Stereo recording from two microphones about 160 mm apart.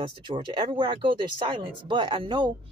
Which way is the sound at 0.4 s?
30° right (ahead or behind).